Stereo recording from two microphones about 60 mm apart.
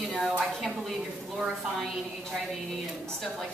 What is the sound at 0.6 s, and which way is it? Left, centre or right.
Speech, centre.